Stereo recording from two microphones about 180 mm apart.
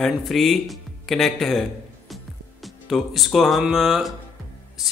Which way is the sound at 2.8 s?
Centre (ahead or behind).